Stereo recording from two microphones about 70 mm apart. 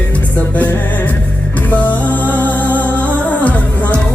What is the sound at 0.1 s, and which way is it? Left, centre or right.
Music, left.